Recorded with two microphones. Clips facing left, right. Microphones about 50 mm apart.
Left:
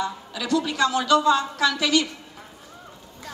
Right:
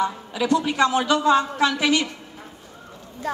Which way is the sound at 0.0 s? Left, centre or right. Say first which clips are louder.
Right 5 dB; right.